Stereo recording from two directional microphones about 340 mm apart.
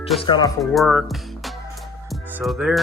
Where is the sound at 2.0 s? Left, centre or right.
Centre.